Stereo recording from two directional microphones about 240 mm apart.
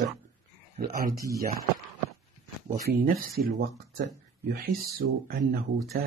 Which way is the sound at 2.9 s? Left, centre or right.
Right.